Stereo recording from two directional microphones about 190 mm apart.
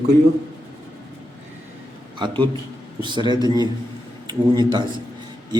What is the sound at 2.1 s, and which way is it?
A man's voice, 25° right (ahead or behind).